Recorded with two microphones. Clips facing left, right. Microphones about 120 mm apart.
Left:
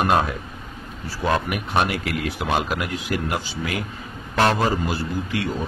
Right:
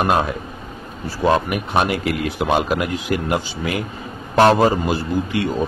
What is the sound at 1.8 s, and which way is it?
Speech, 5° right (ahead or behind).